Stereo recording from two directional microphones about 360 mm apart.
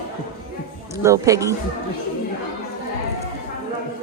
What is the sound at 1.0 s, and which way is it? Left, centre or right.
Speech, centre.